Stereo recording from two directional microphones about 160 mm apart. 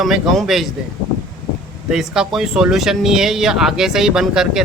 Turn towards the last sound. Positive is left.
turn(degrees=-5)  # may be behind; listen again after turning